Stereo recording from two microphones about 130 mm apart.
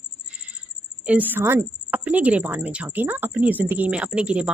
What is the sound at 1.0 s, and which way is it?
A woman's voice, 15° right (ahead or behind).